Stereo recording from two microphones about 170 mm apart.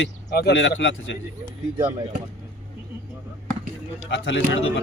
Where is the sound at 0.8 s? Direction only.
90° left.